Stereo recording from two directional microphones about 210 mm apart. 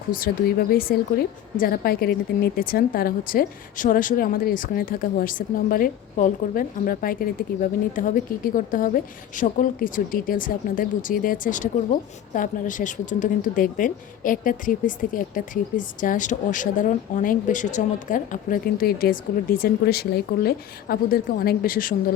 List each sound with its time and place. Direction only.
0.1 s a woman's voice: 45° left (ahead or behind)